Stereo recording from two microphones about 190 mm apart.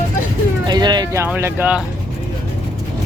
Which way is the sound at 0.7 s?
20° right (ahead or behind).